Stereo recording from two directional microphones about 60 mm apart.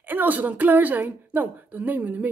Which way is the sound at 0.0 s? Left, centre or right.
Right.